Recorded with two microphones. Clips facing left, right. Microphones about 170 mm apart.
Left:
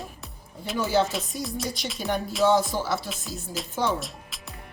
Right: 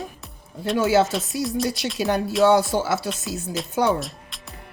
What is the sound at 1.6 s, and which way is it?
Music, 70° right (ahead or behind).